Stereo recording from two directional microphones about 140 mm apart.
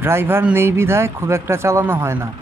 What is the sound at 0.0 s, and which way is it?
Speech, 15° right (ahead or behind).